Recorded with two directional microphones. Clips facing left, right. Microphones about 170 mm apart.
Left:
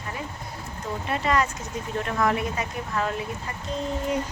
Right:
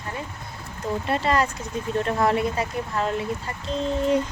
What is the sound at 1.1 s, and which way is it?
Speech, 35° right (ahead or behind).